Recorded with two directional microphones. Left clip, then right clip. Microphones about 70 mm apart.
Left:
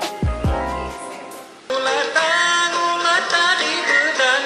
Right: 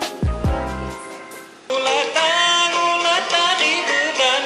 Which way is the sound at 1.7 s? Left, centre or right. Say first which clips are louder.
Even; right.